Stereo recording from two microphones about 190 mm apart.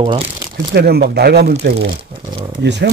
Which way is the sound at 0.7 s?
55° right (ahead or behind).